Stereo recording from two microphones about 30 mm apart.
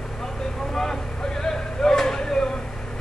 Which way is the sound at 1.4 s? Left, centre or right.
Centre.